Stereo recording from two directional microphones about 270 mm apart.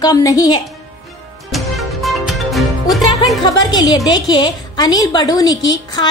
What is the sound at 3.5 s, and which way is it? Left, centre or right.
A woman's voice, centre.